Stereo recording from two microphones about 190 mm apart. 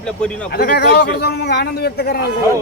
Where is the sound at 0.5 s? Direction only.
55° left (ahead or behind).